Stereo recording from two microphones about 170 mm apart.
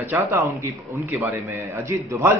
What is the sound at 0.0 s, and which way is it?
A man's voice, 15° right (ahead or behind).